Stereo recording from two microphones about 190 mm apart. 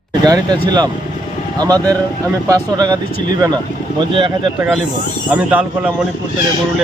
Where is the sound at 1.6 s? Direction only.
20° right (ahead or behind).